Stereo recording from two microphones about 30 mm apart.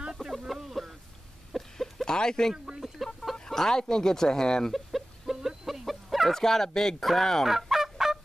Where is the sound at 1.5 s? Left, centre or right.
Centre.